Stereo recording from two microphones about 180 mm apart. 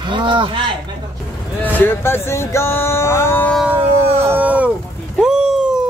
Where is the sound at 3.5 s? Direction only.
5° right (ahead or behind).